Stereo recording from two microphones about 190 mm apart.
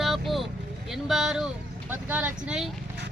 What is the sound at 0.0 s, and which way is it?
Vehicle, centre (ahead or behind).